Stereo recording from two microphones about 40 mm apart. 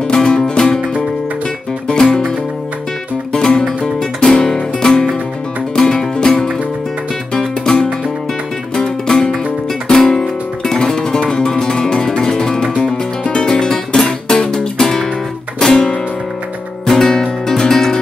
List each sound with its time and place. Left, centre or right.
0.1 s music: centre
1.9 s music: centre
3.3 s music: centre
7.3 s music: centre
9.8 s guitar: centre
10.8 s music: centre